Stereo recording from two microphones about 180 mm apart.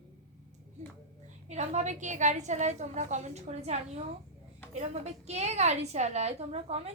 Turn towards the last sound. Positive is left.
turn(degrees=-35)  # may be behind; listen again after turning